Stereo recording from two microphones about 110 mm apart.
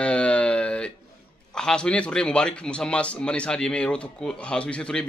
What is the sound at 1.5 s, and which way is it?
A man's voice, 5° left (ahead or behind).